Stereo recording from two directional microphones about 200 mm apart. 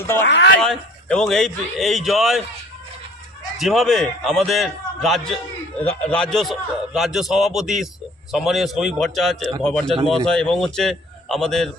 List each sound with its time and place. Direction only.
0.3 s speech: 65° left (ahead or behind)
0.6 s a man's voice: 5° left (ahead or behind)
3.6 s a man's voice: centre (ahead or behind)